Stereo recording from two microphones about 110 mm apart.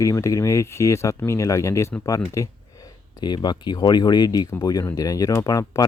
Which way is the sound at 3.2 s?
40° left (ahead or behind).